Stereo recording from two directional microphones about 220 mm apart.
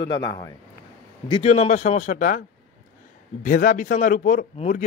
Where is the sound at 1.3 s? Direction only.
30° left (ahead or behind).